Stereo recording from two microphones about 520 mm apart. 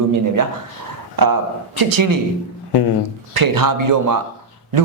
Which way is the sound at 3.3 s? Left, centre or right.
Right.